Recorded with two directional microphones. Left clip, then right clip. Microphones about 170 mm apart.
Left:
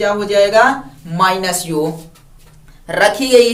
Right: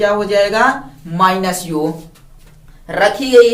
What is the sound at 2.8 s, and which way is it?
Speech, 60° left (ahead or behind).